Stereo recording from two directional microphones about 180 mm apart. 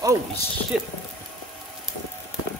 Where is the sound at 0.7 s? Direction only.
5° right (ahead or behind).